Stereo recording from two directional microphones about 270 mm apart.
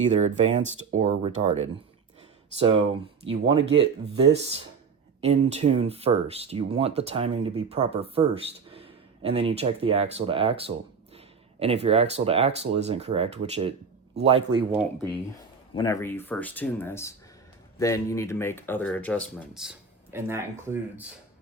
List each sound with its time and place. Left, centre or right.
0.1 s a man's voice: right
14.7 s speech: centre
15.7 s speech: centre
20.1 s speech: centre